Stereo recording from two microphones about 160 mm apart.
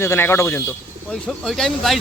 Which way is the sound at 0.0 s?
15° left (ahead or behind).